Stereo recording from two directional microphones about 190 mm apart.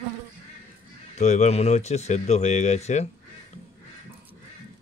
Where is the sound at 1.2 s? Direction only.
35° left (ahead or behind).